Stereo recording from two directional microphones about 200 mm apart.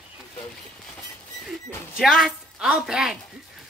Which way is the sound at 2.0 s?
Centre (ahead or behind).